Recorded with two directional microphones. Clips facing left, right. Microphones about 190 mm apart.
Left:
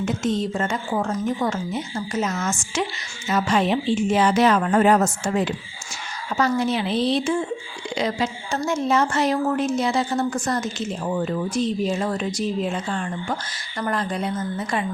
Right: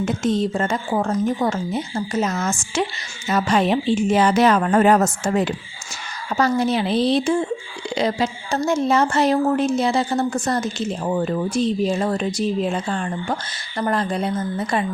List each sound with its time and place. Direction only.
0.0 s a woman's voice: 35° right (ahead or behind)